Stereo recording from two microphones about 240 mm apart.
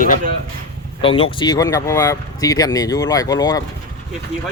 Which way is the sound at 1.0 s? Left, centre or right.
Left.